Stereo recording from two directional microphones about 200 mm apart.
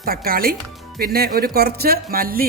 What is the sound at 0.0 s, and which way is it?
Speech, 50° right (ahead or behind).